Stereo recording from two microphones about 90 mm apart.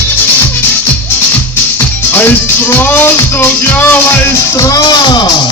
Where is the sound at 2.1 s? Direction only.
25° left (ahead or behind).